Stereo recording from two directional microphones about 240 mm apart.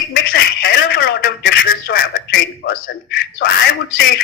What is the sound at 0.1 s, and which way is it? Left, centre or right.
Telephone, left.